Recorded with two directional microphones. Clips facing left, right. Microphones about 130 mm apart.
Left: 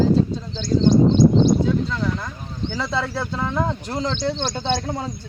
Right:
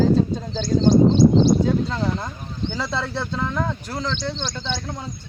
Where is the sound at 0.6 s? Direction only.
40° right (ahead or behind).